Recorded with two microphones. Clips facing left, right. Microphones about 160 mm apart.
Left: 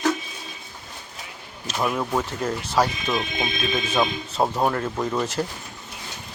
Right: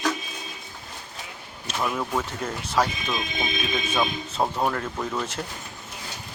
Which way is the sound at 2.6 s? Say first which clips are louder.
Left 2 dB; 30° left (ahead or behind).